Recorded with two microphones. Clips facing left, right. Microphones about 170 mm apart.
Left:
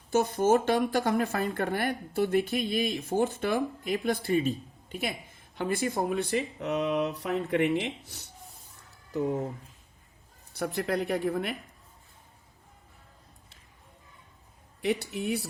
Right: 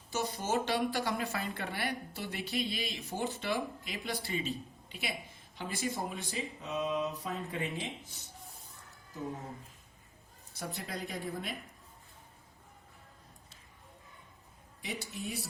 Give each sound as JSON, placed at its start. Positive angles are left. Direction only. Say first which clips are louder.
{"t": 0.1, "sound": "a woman's voice", "louder": "left 10 dB", "side_deg": 50}
{"t": 10.5, "sound": "speech", "louder": "left 11 dB", "side_deg": 65}
{"t": 14.8, "sound": "speech", "louder": "left 11 dB", "side_deg": 65}